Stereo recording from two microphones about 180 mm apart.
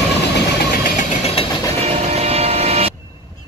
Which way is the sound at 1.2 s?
30° left (ahead or behind).